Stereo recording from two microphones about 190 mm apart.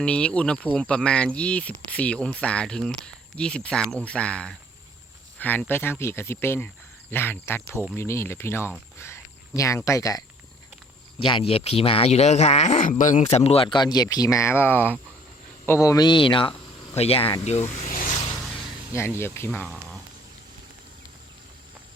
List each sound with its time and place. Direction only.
0.0 s speech: 5° left (ahead or behind); by 18.3 s 35° left (ahead or behind)
19.2 s speech: 15° left (ahead or behind)